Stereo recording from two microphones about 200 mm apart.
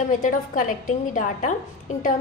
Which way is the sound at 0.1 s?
40° left (ahead or behind).